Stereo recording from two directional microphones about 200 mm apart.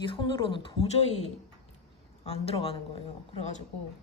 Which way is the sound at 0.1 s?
25° left (ahead or behind).